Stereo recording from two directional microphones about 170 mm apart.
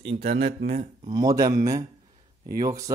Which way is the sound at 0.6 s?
55° right (ahead or behind).